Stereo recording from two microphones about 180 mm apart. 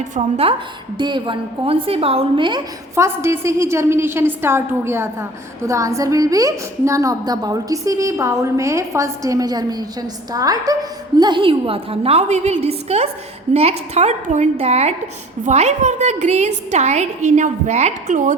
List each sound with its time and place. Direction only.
0.0 s a woman's voice: 35° right (ahead or behind)
2.9 s a woman's voice: 15° right (ahead or behind); by 18.3 s 45° right (ahead or behind)